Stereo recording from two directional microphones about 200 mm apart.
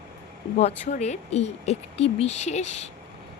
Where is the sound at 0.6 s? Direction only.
35° left (ahead or behind).